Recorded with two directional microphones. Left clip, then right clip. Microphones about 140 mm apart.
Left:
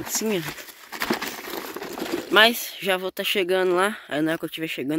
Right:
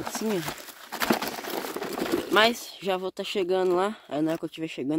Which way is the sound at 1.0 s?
30° right (ahead or behind).